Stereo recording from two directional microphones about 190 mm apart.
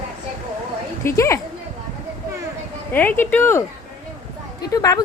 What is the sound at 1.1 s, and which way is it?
Speech, 15° left (ahead or behind).